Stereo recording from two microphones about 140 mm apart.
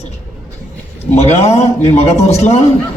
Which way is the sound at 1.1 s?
50° left (ahead or behind).